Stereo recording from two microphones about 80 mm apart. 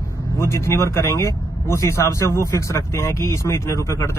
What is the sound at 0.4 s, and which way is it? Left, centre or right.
Speech, left.